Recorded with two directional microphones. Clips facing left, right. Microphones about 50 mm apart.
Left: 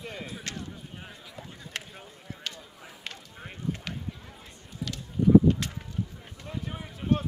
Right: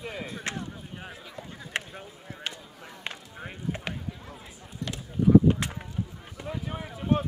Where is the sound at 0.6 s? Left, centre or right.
Centre.